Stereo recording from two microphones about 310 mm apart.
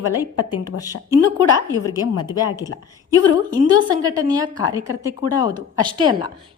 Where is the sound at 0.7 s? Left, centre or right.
Left.